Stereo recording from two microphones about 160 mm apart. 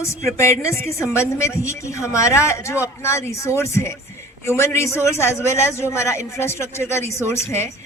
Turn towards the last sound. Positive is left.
turn(degrees=15)  # may be behind; listen again after turning